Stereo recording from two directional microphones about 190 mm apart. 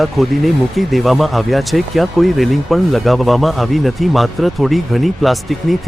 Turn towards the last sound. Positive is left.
turn(degrees=0)  # may be behind; listen again after turning